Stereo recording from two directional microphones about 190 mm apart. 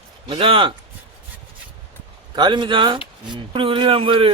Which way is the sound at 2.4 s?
25° right (ahead or behind).